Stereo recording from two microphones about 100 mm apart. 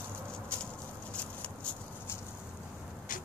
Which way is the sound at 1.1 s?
10° left (ahead or behind).